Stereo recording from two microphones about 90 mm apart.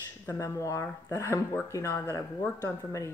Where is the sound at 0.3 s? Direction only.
35° left (ahead or behind).